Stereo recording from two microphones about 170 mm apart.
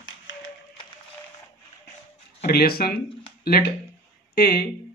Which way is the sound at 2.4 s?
65° left (ahead or behind).